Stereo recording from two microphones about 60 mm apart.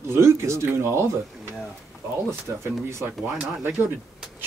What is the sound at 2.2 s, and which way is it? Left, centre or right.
Speech, right.